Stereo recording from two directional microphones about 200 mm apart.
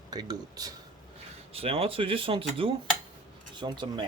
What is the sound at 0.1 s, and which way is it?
Speech, 20° right (ahead or behind).